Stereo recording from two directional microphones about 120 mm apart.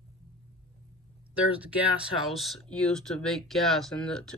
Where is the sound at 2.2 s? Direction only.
Centre (ahead or behind).